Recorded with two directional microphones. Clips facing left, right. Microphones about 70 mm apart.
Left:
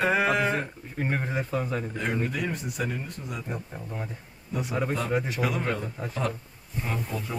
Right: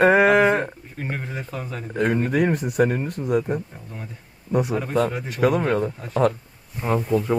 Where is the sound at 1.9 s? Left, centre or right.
Right.